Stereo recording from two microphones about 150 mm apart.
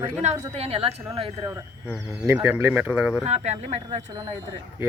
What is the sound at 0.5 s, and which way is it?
Speech, 40° right (ahead or behind).